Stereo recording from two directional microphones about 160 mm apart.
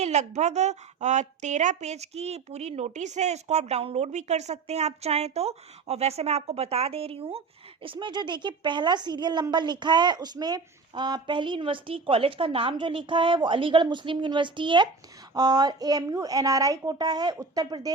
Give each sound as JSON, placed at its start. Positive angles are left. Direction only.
{"t": 0.0, "sound": "a woman's voice", "side_deg": -45}